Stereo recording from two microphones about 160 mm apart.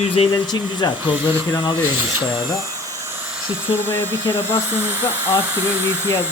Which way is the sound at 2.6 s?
20° right (ahead or behind).